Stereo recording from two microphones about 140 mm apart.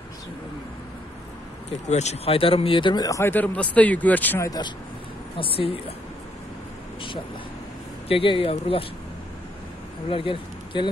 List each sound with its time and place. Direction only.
1.9 s speech: 55° left (ahead or behind); by 4.5 s 10° left (ahead or behind)
4.5 s speech: 30° left (ahead or behind)
5.4 s a woman's voice: 40° left (ahead or behind)
8.1 s speech: 40° left (ahead or behind)
10.0 s a man's voice: 40° left (ahead or behind)